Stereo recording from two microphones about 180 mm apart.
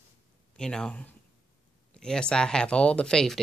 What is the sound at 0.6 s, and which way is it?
Speech, 5° left (ahead or behind).